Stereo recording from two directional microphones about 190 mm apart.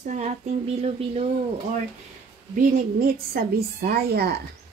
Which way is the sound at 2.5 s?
45° right (ahead or behind).